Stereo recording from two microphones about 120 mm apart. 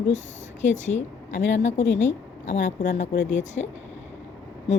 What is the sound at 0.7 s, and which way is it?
A woman's voice, 80° left.